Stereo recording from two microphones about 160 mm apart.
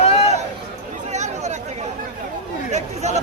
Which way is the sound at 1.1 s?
45° right (ahead or behind).